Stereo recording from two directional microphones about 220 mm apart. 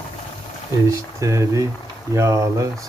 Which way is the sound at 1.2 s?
15° right (ahead or behind).